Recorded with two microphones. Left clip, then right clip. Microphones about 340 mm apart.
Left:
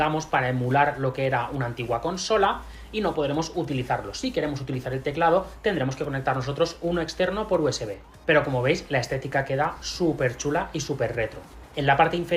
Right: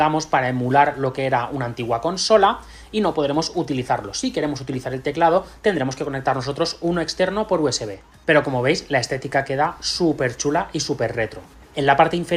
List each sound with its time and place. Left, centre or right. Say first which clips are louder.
0.0 s speech: right 5 dB; centre